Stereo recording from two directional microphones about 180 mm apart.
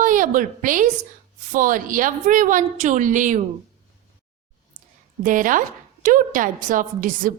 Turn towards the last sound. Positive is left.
turn(degrees=-50)  # may be behind; listen again after turning